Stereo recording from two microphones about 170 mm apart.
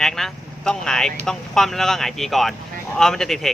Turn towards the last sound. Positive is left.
turn(degrees=0)  # may be behind; listen again after turning